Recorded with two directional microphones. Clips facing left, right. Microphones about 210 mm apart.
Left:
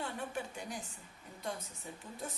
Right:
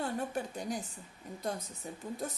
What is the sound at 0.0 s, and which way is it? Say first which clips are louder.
Speech: right 5 dB; 40° right (ahead or behind).